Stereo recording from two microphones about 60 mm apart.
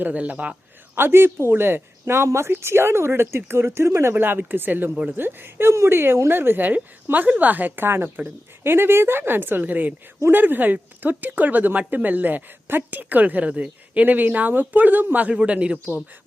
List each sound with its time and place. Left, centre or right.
0.0 s speech: right
0.9 s speech: right
4.1 s a woman's voice: right; by 15.8 s centre